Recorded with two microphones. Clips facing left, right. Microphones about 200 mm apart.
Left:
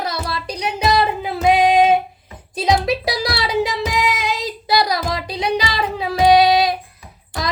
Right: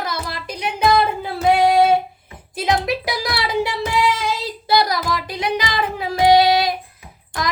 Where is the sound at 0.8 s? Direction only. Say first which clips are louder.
Right 1 dB; 20° left (ahead or behind).